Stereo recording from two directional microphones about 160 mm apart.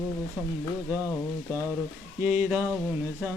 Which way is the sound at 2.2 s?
10° right (ahead or behind).